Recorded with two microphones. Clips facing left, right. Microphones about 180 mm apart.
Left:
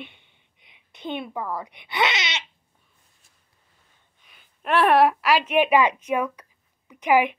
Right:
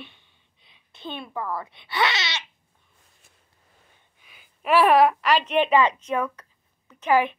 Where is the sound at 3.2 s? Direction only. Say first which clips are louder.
Right 5 dB; 65° right (ahead or behind).